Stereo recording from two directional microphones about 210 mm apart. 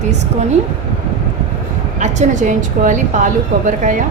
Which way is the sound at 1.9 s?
35° right (ahead or behind).